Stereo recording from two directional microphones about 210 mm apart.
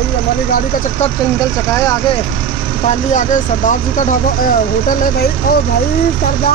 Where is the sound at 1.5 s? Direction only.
15° left (ahead or behind).